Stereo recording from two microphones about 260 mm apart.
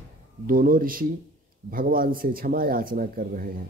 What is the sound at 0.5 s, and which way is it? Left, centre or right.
Speech, right.